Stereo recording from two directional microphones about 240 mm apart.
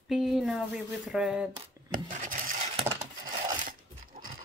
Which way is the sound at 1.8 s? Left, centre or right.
Centre.